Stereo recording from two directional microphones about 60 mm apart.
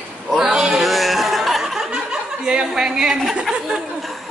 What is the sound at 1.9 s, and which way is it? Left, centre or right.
Chuckle, centre.